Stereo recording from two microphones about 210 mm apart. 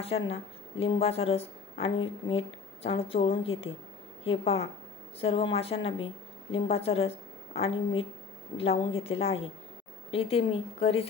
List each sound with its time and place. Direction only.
0.0 s a woman's voice: 30° left (ahead or behind)